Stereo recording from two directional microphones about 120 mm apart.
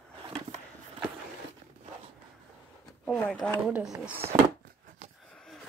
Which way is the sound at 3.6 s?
5° right (ahead or behind).